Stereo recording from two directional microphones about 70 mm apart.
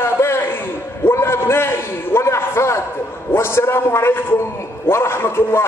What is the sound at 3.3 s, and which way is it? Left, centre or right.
A man's voice, left.